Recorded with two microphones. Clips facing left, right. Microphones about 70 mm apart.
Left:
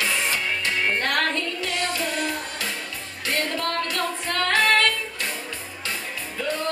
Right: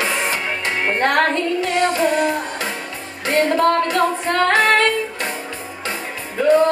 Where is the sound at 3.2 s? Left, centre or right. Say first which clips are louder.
Right 11 dB; right.